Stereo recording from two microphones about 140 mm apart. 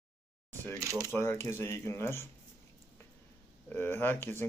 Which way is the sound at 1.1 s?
15° left (ahead or behind).